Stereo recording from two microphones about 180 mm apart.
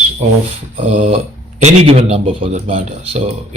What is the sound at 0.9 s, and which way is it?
Speech, 35° right (ahead or behind).